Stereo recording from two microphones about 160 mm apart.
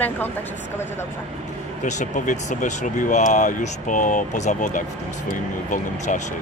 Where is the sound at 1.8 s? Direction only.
50° left (ahead or behind).